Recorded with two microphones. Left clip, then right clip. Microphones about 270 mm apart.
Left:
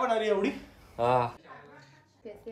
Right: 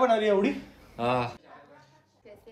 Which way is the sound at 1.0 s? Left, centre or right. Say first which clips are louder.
Left 1 dB; left.